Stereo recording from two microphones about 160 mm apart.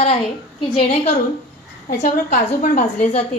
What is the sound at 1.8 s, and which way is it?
A woman's voice, 55° left (ahead or behind).